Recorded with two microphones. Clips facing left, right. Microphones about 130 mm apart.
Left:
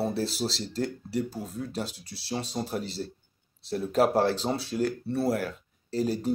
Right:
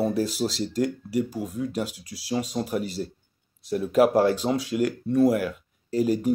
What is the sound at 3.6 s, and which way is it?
Speech, 35° left (ahead or behind).